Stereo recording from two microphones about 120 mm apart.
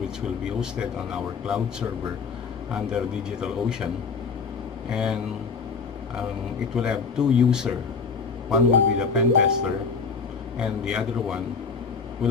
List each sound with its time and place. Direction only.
0.6 s a man's voice: 5° right (ahead or behind)
4.9 s speech: 5° right (ahead or behind)
6.7 s a man's voice: 5° right (ahead or behind)